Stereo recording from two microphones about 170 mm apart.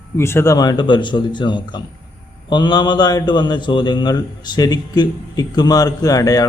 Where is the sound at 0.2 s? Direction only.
15° left (ahead or behind).